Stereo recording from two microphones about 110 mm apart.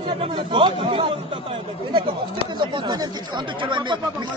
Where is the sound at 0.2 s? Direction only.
55° right (ahead or behind).